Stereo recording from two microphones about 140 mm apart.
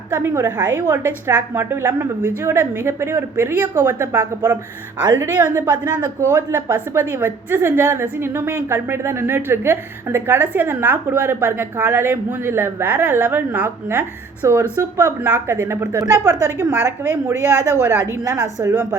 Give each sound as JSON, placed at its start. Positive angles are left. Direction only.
{"t": 0.1, "sound": "a woman's voice", "side_deg": -15}